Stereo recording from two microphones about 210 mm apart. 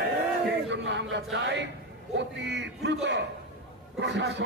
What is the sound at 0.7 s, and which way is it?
A man's voice, 60° right (ahead or behind).